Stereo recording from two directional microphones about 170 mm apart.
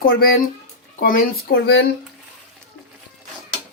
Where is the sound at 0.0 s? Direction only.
60° left (ahead or behind); by 1.9 s 80° left.